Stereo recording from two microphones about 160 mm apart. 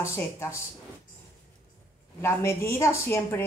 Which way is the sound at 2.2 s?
15° left (ahead or behind).